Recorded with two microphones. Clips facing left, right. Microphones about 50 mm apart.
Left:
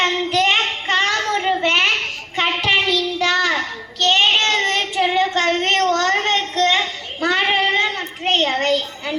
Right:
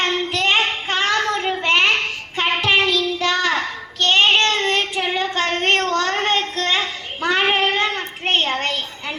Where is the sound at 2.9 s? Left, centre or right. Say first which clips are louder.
Left 1 dB; centre.